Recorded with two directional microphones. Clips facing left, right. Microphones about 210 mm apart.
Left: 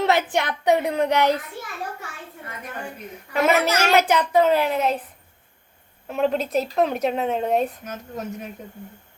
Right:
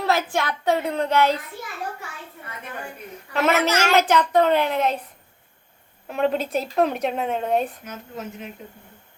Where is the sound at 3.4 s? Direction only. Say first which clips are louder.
Even; 10° left (ahead or behind).